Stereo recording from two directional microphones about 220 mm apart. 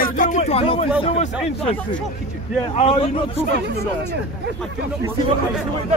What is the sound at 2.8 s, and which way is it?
Speech, 25° left (ahead or behind).